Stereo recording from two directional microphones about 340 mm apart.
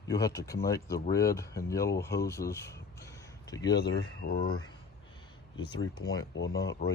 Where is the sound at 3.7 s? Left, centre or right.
Left.